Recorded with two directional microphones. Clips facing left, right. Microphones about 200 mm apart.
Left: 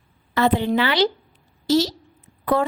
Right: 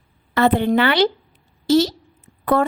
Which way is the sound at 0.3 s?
55° right (ahead or behind).